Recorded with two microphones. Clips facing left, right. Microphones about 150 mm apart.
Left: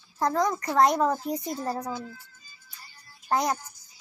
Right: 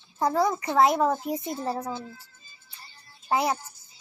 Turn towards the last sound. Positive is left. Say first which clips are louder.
# right 1 dB
turn(degrees=-25)  # may be behind; listen again after turning